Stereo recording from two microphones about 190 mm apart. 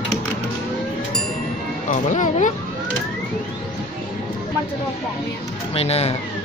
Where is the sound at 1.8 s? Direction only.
40° left (ahead or behind).